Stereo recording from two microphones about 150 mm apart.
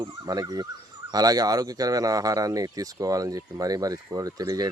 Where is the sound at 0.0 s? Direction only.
25° right (ahead or behind).